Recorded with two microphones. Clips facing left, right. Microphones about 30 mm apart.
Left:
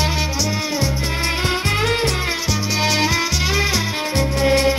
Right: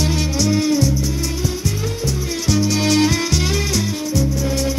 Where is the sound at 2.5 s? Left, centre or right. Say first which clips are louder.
Right 5 dB; centre.